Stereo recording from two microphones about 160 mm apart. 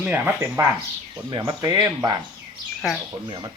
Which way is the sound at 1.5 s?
25° right (ahead or behind).